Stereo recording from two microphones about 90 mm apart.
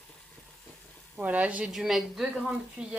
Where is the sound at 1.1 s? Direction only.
15° right (ahead or behind).